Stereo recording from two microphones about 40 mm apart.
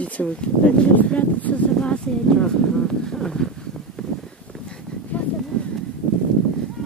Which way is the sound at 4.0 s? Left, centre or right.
Centre.